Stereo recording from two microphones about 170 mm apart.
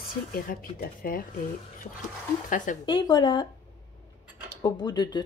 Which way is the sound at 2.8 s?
25° left (ahead or behind).